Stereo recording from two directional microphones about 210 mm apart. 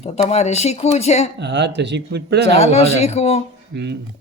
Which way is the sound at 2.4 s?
30° left (ahead or behind).